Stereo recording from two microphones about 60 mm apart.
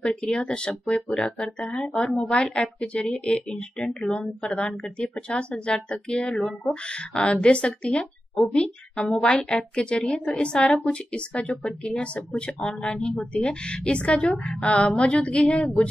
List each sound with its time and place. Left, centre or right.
0.0 s speech: centre
0.8 s speech: centre
10.6 s speech: centre
10.9 s speech: centre